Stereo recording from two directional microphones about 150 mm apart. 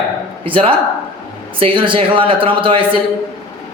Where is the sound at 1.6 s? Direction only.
35° right (ahead or behind).